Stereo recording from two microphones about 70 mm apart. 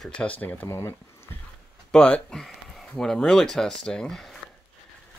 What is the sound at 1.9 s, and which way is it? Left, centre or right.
Speech, centre.